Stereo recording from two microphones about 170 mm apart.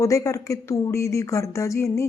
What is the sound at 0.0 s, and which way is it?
A woman's voice, 20° left (ahead or behind).